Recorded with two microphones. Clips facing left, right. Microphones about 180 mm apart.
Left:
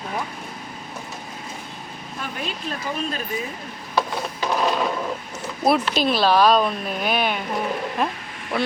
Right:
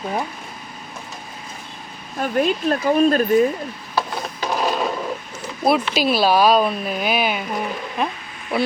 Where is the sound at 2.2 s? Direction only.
50° right (ahead or behind).